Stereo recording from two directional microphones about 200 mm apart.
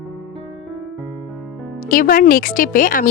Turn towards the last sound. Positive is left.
turn(degrees=40)  # may be behind; listen again after turning